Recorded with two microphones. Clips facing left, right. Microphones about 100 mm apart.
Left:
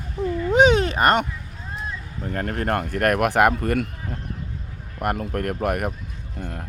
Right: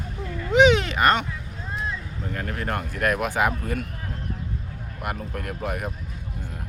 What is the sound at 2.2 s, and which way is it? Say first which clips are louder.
Speech: left 5 dB; 45° left (ahead or behind).